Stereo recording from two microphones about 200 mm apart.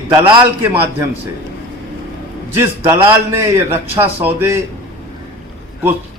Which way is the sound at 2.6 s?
15° right (ahead or behind).